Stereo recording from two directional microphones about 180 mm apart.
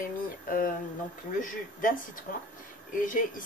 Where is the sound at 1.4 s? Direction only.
50° left (ahead or behind).